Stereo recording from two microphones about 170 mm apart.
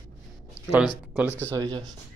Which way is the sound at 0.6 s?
15° left (ahead or behind).